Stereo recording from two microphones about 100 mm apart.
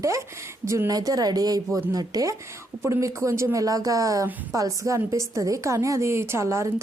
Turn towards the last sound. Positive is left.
turn(degrees=-30)  # may be behind; listen again after turning